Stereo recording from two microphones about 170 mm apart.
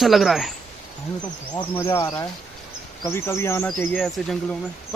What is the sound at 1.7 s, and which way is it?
Speech, 20° left (ahead or behind).